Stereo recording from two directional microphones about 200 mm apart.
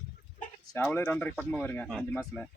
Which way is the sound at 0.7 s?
10° left (ahead or behind).